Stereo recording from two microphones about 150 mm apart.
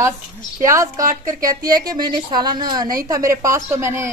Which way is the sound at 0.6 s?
20° right (ahead or behind).